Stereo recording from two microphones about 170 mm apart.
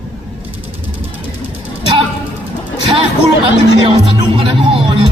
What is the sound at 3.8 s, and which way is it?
Speech, 30° right (ahead or behind).